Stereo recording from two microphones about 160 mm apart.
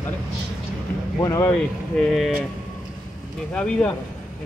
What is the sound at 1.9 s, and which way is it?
Speech, 5° left (ahead or behind).